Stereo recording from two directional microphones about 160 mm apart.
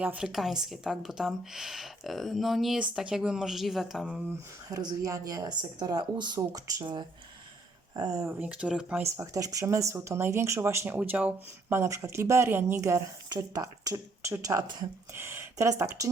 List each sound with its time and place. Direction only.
0.0 s a woman's voice: 5° right (ahead or behind)
4.7 s speech: 25° right (ahead or behind)
8.4 s speech: 5° right (ahead or behind)
9.0 s speech: 20° right (ahead or behind)